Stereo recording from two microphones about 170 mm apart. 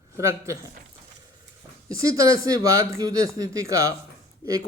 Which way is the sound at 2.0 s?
20° right (ahead or behind).